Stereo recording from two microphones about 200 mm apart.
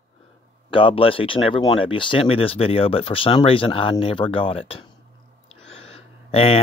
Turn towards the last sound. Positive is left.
turn(degrees=30)  # may be behind; listen again after turning